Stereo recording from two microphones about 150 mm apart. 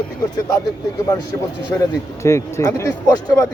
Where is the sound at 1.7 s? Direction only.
20° left (ahead or behind).